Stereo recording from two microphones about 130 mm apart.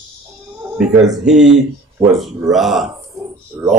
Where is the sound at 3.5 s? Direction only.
20° right (ahead or behind).